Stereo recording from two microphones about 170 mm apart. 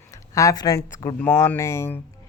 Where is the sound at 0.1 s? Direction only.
20° left (ahead or behind).